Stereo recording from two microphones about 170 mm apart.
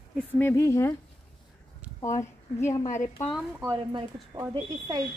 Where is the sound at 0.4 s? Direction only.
15° left (ahead or behind).